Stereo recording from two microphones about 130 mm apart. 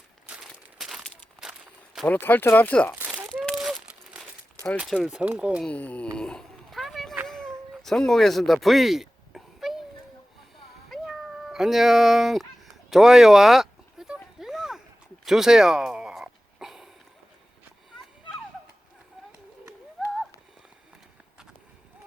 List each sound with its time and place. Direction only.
0.5 s a sound: 5° right (ahead or behind)
2.0 s speech: 15° left (ahead or behind)
2.9 s crumpling: 10° right (ahead or behind)
3.4 s crumpling: centre (ahead or behind)
4.8 s speech: 5° right (ahead or behind)
5.6 s speech: 10° left (ahead or behind)
6.1 s a sound: 5° left (ahead or behind)
10.8 s cat: centre (ahead or behind)
12.9 s a sound: 5° right (ahead or behind)
20.0 s horse: centre (ahead or behind)